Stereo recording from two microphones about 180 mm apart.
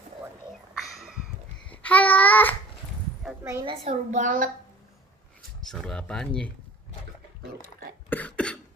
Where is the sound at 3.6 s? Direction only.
40° right (ahead or behind).